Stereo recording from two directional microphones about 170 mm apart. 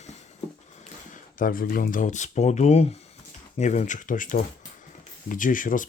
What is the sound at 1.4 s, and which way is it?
Speech, 55° left (ahead or behind).